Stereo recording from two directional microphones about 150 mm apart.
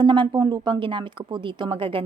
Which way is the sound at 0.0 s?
30° right (ahead or behind).